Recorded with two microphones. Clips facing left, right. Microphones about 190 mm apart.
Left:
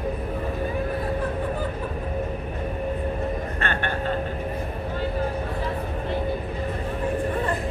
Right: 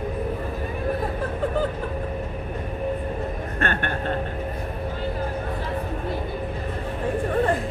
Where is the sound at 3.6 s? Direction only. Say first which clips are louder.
Right 4 dB; 50° right (ahead or behind).